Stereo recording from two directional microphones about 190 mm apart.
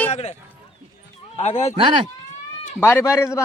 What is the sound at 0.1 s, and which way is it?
Run, 35° left (ahead or behind).